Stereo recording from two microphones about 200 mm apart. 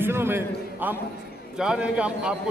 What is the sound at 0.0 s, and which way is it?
A man's voice, 10° right (ahead or behind).